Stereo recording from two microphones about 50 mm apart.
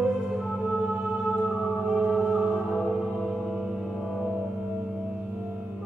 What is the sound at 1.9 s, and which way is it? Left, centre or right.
Music, centre.